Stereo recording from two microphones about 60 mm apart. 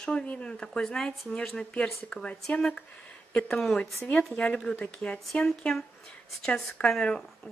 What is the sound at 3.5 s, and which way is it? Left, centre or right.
Speech, centre.